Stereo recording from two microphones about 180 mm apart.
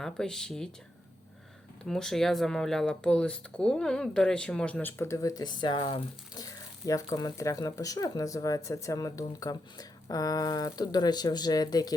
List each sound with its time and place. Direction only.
0.0 s speech: 5° left (ahead or behind)
1.8 s speech: centre (ahead or behind); by 11.9 s 20° left (ahead or behind)